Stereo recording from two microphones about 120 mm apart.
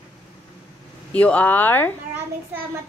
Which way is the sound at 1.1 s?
10° left (ahead or behind).